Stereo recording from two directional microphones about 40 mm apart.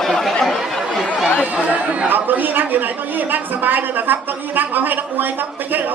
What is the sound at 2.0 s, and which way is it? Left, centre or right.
A man's voice, right.